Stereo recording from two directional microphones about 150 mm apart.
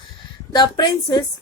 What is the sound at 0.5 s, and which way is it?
Speech, 30° left (ahead or behind).